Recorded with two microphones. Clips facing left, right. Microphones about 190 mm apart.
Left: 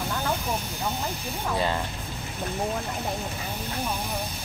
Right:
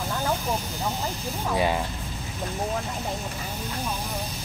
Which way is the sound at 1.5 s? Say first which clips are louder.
Right 2 dB; 10° right (ahead or behind).